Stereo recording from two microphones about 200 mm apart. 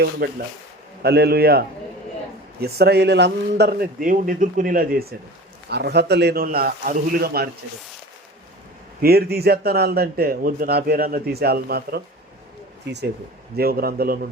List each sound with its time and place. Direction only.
0.2 s a man's voice: 50° right (ahead or behind)
9.0 s a man's voice: 50° right (ahead or behind)